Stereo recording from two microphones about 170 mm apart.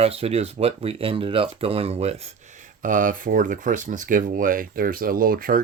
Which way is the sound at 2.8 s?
50° right (ahead or behind).